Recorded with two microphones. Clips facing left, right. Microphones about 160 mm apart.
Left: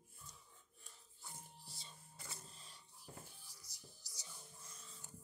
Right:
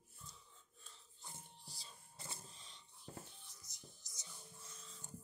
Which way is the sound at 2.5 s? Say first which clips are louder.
Even; 5° left (ahead or behind).